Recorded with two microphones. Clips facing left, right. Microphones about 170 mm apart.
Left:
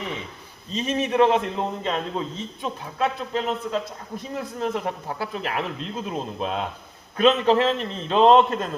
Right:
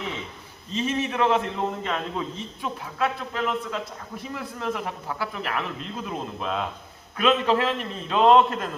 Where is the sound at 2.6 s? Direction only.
25° left (ahead or behind).